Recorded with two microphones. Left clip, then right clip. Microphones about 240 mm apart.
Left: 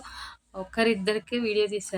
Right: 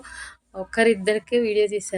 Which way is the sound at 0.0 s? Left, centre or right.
Centre.